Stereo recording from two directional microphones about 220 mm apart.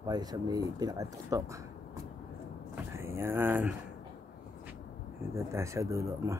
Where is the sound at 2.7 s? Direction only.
10° right (ahead or behind).